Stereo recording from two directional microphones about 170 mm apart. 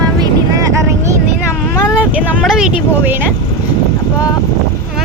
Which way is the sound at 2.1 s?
5° right (ahead or behind).